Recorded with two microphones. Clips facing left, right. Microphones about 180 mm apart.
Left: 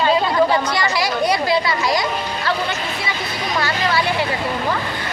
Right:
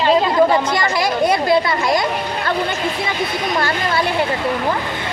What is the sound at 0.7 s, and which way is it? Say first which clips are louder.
A woman's voice: right 2 dB; 50° right (ahead or behind).